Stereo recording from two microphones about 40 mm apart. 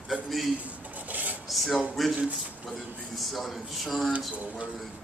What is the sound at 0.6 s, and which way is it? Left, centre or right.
Rub, right.